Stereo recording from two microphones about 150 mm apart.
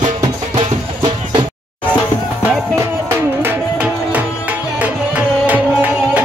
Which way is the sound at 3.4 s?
10° right (ahead or behind).